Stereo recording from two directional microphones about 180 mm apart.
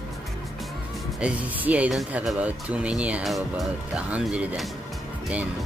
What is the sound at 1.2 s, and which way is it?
Speech, 10° right (ahead or behind).